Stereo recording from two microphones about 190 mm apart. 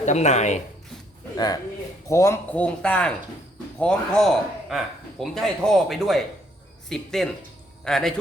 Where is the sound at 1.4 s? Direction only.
20° left (ahead or behind).